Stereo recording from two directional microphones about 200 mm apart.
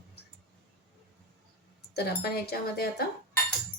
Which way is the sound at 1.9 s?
50° left (ahead or behind).